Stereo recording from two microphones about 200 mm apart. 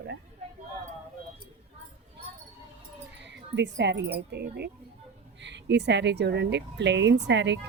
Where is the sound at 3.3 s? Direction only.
60° right (ahead or behind).